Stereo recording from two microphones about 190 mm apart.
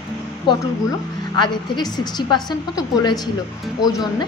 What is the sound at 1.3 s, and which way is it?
A woman's voice, 25° left (ahead or behind).